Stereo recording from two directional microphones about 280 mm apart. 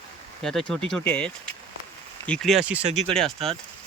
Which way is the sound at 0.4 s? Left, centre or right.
Centre.